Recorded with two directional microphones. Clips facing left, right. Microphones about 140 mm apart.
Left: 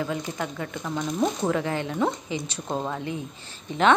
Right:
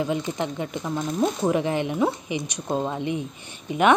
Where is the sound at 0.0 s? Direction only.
20° right (ahead or behind).